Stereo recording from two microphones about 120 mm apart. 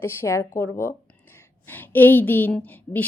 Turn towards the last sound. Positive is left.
turn(degrees=15)  # may be behind; listen again after turning